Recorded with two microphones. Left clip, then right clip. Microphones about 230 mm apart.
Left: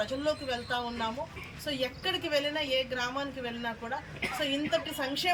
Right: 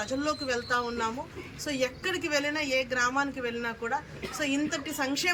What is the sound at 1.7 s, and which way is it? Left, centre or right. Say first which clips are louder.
A woman's voice: right 2 dB; centre.